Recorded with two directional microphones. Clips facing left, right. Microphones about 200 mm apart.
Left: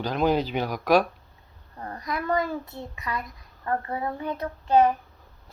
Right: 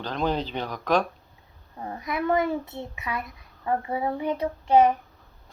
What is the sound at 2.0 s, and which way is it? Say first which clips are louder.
Child singing: right 3 dB; 20° right (ahead or behind).